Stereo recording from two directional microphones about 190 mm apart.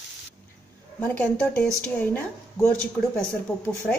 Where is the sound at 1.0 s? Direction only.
5° left (ahead or behind).